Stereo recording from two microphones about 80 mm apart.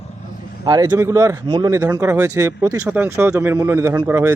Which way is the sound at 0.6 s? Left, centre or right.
Right.